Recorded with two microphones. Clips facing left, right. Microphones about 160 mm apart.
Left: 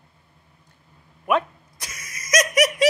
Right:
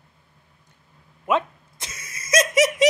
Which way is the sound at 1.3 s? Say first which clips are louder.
Left 1 dB; 20° right (ahead or behind).